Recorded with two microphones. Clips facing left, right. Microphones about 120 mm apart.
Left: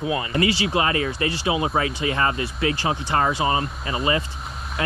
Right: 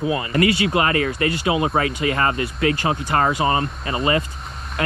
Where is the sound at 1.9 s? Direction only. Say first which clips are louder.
Right 2 dB; 25° left (ahead or behind).